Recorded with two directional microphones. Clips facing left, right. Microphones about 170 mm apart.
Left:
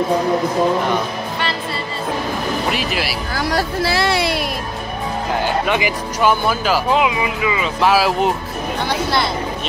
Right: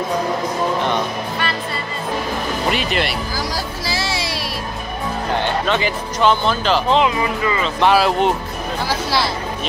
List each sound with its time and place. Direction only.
2.7 s speech: centre (ahead or behind)
3.3 s speech: 65° left (ahead or behind)
5.4 s speech: 10° left (ahead or behind)